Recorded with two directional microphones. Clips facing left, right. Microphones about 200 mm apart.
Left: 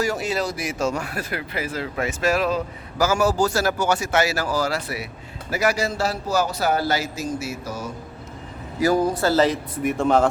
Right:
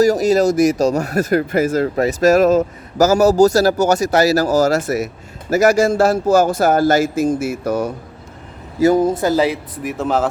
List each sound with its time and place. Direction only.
0.0 s speech: 40° right (ahead or behind); by 7.9 s 60° right (ahead or behind)
8.8 s speech: 20° right (ahead or behind)
9.7 s speech: centre (ahead or behind)